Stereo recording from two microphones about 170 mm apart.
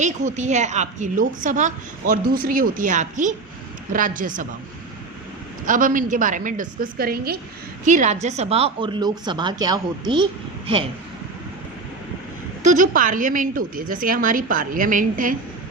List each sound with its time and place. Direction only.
0.0 s a woman's voice: 45° right (ahead or behind)
5.6 s a woman's voice: 50° right (ahead or behind)
7.9 s a woman's voice: 45° right (ahead or behind); by 10.2 s 25° right (ahead or behind)
12.6 s a woman's voice: 50° right (ahead or behind)